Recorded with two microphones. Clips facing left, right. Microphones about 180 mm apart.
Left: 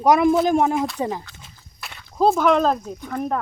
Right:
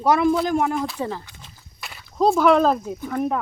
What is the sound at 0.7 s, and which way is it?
Speech, centre (ahead or behind).